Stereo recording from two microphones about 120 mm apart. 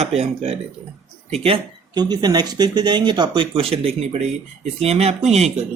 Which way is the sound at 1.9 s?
35° right (ahead or behind).